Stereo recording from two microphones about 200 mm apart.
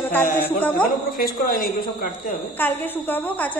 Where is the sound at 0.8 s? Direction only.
45° left (ahead or behind).